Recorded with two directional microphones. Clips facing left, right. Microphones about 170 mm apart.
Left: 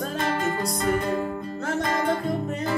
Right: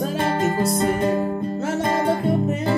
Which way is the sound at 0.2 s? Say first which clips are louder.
Right 5 dB; 25° right (ahead or behind).